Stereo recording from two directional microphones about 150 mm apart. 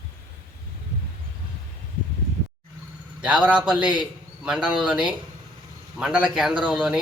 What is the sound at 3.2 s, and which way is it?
A man's voice, 10° right (ahead or behind).